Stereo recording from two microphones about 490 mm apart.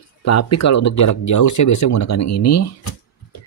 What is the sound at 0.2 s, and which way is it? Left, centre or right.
Speech, left.